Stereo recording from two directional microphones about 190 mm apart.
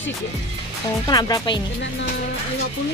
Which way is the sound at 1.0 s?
20° left (ahead or behind).